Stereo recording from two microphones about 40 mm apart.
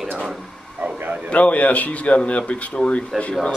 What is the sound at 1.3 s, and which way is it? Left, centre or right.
Speech, left.